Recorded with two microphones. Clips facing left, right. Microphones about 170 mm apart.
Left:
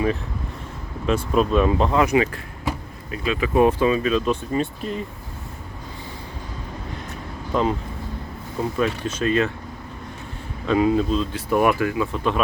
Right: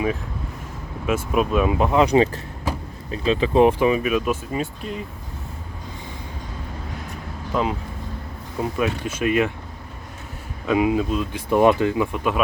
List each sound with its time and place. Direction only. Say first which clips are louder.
1.0 s speech: left 1 dB; 10° right (ahead or behind)
3.1 s speech: right 3 dB; 30° right (ahead or behind); by 5.0 s centre (ahead or behind)
7.5 s speech: left 2 dB; 5° right (ahead or behind)
8.8 s speech: even; 10° right (ahead or behind)
10.7 s speech: left 1 dB; 10° right (ahead or behind)